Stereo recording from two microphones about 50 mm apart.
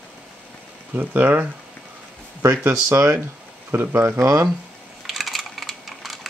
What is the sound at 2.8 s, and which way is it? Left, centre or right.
Speech, right.